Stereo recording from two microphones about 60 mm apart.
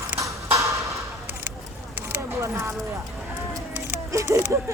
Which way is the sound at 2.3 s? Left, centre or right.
Right.